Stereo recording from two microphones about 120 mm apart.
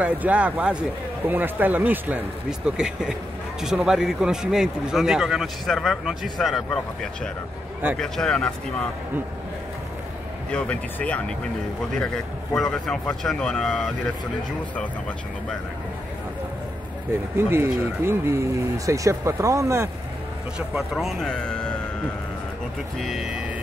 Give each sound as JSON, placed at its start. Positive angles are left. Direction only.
{"t": 0.0, "sound": "a man's voice", "side_deg": -10}
{"t": 10.5, "sound": "a man's voice", "side_deg": 10}
{"t": 17.4, "sound": "speech", "side_deg": -20}
{"t": 20.5, "sound": "a man's voice", "side_deg": -5}
{"t": 22.9, "sound": "a man's voice", "side_deg": 0}